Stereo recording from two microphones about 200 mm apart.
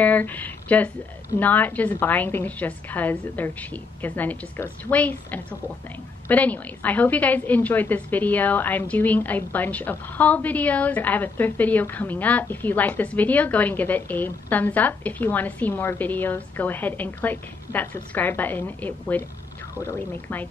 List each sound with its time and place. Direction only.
0.0 s a woman's voice: 10° left (ahead or behind)